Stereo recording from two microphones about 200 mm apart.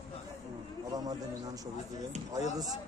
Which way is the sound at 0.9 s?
20° right (ahead or behind).